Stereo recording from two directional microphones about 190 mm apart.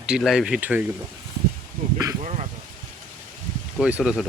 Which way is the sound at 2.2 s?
35° right (ahead or behind).